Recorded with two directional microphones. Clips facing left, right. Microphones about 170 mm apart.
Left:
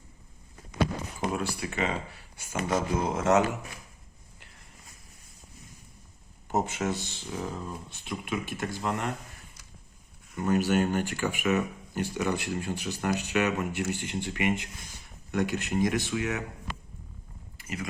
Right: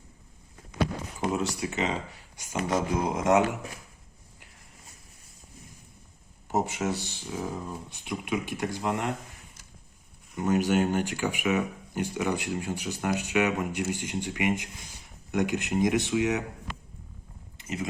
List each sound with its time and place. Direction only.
1.3 s speech: 20° right (ahead or behind)
6.5 s speech: 10° right (ahead or behind)
10.3 s speech: 15° right (ahead or behind)
17.6 s a sound: 25° right (ahead or behind)